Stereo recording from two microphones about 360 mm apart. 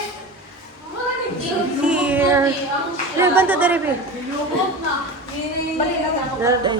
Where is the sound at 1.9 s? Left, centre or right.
Centre.